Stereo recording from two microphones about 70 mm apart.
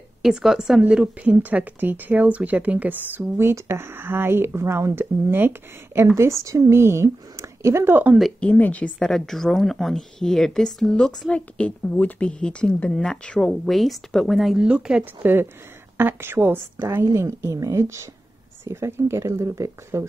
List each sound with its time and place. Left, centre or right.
0.2 s speech: centre; by 5.5 s right
6.1 s speech: right
8.4 s a woman's voice: left
9.0 s speech: centre
14.6 s speech: centre
15.2 s speech: right
17.0 s a woman's voice: right